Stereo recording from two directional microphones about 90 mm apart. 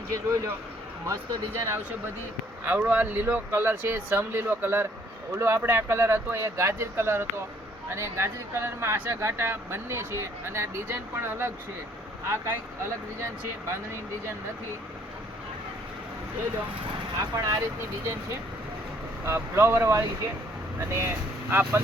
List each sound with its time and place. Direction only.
0.1 s a man's voice: 30° right (ahead or behind)
17.2 s a man's voice: 40° right (ahead or behind)
19.2 s speech: 25° right (ahead or behind)